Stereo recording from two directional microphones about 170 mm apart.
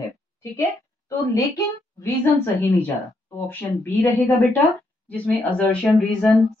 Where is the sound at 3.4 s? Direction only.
15° left (ahead or behind).